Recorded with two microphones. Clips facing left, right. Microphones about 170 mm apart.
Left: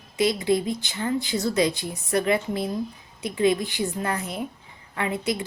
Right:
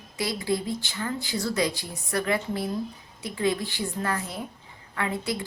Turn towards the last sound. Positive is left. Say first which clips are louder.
# left 3 dB
turn(degrees=20)  # may be behind; listen again after turning